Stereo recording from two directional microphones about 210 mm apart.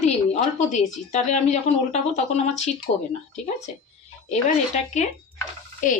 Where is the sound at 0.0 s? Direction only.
35° left (ahead or behind).